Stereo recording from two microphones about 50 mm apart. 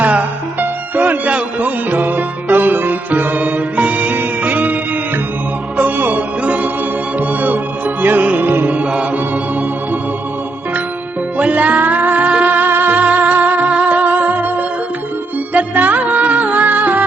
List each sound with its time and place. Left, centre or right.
0.0 s music: right
11.3 s music: right